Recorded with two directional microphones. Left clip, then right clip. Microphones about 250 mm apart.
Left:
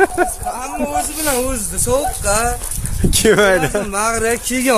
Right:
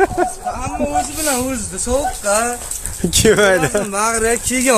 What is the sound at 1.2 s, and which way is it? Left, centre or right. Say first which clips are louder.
Speech: left 1 dB; left.